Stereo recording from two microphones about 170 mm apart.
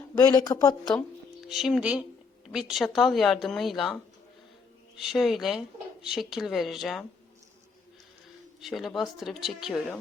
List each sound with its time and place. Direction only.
0.2 s speech: 25° left (ahead or behind)
1.5 s speech: centre (ahead or behind)
4.9 s speech: centre (ahead or behind)
8.6 s speech: centre (ahead or behind)